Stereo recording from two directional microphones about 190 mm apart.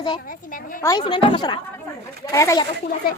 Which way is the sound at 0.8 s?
25° left (ahead or behind).